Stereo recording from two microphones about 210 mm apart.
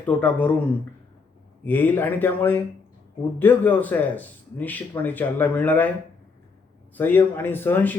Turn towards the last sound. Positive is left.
turn(degrees=10)  # may be behind; listen again after turning